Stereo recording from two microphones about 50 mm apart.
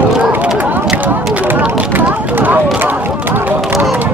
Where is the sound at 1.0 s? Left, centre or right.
Right.